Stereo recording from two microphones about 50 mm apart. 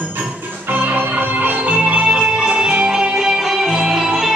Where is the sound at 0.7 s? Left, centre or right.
Right.